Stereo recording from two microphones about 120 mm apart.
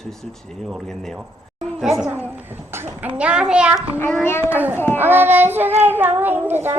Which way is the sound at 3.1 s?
10° right (ahead or behind).